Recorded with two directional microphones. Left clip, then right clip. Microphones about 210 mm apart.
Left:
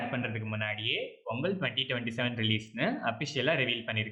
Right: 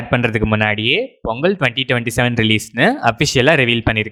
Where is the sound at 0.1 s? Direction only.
50° right (ahead or behind).